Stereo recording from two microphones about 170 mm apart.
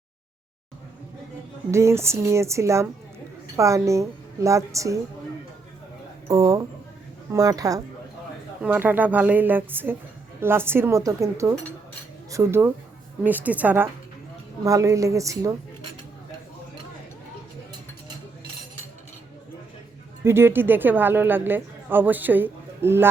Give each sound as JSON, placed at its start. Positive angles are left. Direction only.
{"t": 1.7, "sound": "a woman's voice", "side_deg": -15}
{"t": 6.2, "sound": "a woman's voice", "side_deg": -20}
{"t": 20.2, "sound": "a woman's voice", "side_deg": -15}